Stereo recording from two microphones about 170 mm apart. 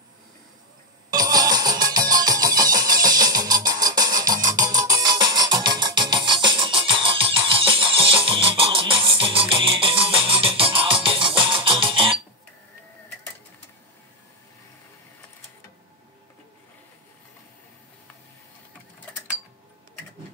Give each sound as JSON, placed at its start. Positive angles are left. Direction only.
{"t": 1.1, "sound": "music", "side_deg": -20}